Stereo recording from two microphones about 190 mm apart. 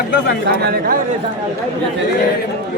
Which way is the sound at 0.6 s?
50° right (ahead or behind).